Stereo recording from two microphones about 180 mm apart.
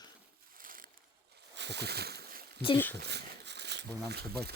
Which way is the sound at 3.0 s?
65° right (ahead or behind).